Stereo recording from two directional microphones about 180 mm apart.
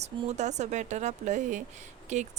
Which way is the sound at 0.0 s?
40° right (ahead or behind).